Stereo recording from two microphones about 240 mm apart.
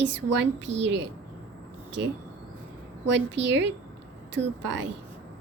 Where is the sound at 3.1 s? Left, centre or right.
Right.